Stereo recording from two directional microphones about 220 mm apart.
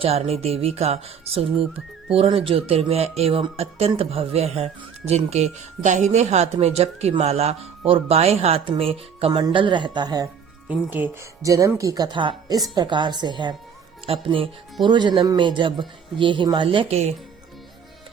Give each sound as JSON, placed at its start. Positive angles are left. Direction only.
{"t": 0.0, "sound": "speech", "side_deg": -30}
{"t": 10.7, "sound": "speech", "side_deg": -10}